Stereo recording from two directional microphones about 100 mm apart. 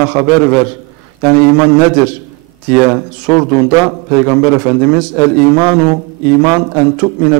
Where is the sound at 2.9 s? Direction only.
10° right (ahead or behind).